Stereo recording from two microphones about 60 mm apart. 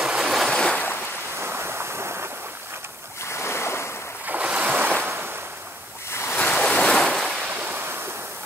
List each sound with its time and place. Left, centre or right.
0.0 s waves: centre
0.5 s waves: centre
1.4 s waves: right
3.3 s waves: left
4.3 s waves: right
5.0 s waves: right
6.0 s waves: left
6.3 s waves: centre
7.1 s waves: centre
7.4 s waves: right